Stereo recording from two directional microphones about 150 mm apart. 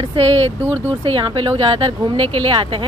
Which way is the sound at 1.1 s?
35° right (ahead or behind).